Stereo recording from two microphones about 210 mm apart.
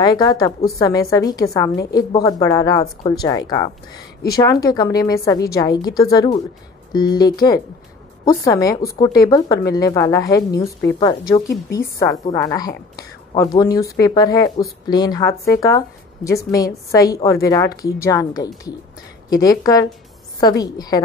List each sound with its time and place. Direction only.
0.0 s speech: 20° left (ahead or behind)
10.5 s a woman's voice: 50° left (ahead or behind)
10.9 s speech: 20° left (ahead or behind)